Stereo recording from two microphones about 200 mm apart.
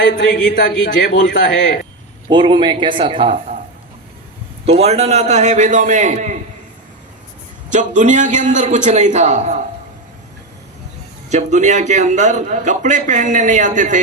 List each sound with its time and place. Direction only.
0.3 s speech: 40° left (ahead or behind)
1.2 s a man's voice: 65° left (ahead or behind)
2.3 s speech: 25° right (ahead or behind)
4.6 s a man's voice: 30° right (ahead or behind)
7.7 s a man's voice: 40° right (ahead or behind)
11.3 s a man's voice: 35° right (ahead or behind)